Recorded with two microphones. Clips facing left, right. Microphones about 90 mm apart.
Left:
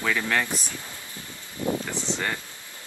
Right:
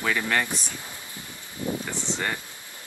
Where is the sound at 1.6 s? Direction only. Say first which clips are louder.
Left 3 dB; 20° left (ahead or behind).